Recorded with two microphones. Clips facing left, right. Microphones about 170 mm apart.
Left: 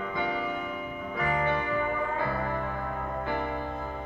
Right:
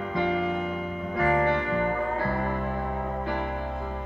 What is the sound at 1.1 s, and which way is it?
Music, 35° right (ahead or behind).